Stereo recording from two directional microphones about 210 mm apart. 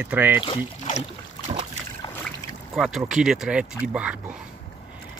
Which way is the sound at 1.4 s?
20° left (ahead or behind).